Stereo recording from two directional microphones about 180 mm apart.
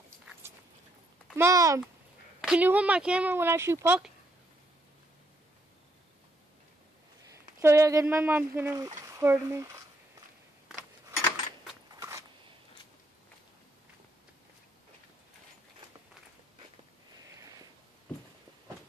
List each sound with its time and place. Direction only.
1.3 s speech: 15° right (ahead or behind)
7.6 s speech: 15° right (ahead or behind)